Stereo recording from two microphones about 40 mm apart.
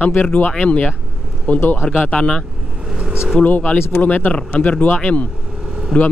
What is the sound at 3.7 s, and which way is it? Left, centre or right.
Speech, left.